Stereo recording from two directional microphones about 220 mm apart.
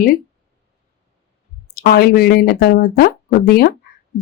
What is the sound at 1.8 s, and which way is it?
Speech, 40° left (ahead or behind).